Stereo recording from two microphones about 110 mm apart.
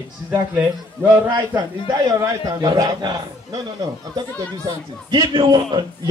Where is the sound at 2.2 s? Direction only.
35° right (ahead or behind).